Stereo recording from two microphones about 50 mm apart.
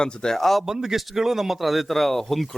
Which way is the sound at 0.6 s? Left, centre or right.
Centre.